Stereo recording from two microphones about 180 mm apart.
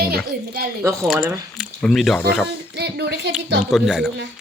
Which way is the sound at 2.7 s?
65° right (ahead or behind).